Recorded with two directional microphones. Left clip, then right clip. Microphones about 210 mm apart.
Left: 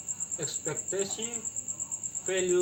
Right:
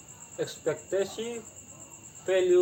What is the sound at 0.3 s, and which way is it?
Speech, 5° right (ahead or behind).